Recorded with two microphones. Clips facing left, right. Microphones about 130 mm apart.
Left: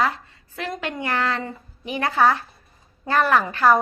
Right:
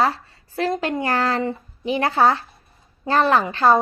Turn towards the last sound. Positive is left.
turn(degrees=-25)  # may be behind; listen again after turning